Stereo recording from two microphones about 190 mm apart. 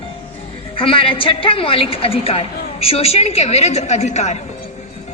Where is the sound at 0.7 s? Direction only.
30° left (ahead or behind).